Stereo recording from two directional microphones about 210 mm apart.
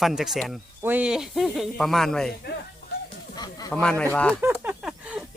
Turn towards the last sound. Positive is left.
turn(degrees=-5)  # may be behind; listen again after turning